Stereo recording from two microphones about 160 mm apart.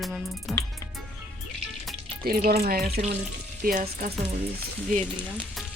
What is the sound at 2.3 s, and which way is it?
Speech, 65° right (ahead or behind).